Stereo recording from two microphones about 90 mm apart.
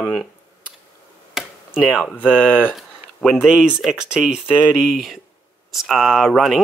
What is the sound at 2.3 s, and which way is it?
Speech, 20° left (ahead or behind).